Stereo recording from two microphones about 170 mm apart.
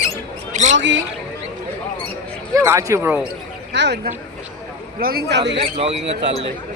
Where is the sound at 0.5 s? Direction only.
45° right (ahead or behind).